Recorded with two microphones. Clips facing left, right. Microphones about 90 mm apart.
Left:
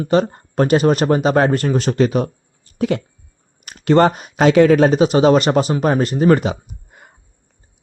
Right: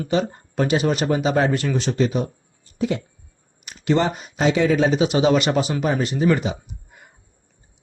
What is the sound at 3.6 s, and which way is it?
Speech, 55° left (ahead or behind).